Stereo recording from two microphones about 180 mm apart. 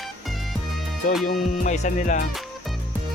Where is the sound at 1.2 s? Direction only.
45° left (ahead or behind).